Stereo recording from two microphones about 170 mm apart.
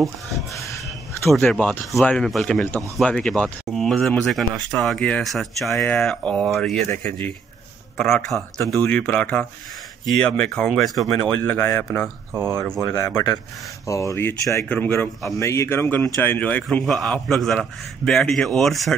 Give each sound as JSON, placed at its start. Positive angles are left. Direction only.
{"t": 1.3, "sound": "speech", "side_deg": 5}
{"t": 12.9, "sound": "speech", "side_deg": 20}